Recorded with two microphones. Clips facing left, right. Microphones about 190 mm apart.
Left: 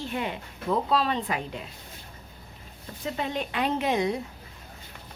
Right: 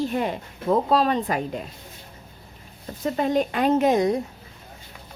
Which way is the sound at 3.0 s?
45° right (ahead or behind).